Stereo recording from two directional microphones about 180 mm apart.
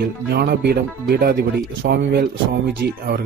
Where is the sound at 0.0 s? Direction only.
65° right (ahead or behind).